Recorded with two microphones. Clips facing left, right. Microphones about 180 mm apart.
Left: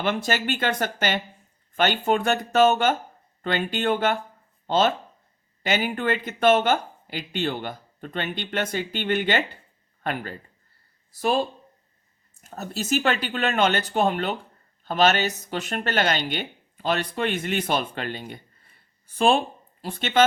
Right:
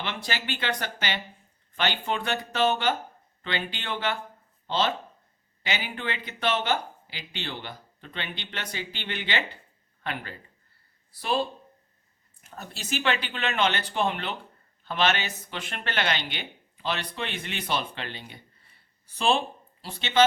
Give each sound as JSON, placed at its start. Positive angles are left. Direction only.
{"t": 0.0, "sound": "a woman's voice", "side_deg": 45}